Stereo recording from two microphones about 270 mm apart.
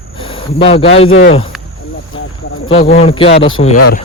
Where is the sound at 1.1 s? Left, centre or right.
Left.